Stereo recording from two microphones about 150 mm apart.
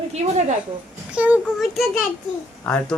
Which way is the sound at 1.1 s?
10° right (ahead or behind).